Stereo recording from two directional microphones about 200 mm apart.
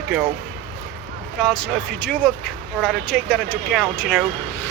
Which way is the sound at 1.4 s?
5° left (ahead or behind).